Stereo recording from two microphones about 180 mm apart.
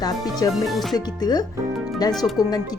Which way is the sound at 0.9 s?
20° left (ahead or behind).